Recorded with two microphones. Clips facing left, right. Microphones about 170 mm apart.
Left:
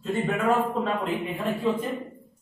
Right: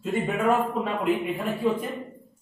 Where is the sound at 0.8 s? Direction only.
10° right (ahead or behind).